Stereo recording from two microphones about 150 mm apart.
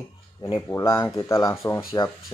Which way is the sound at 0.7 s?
20° left (ahead or behind).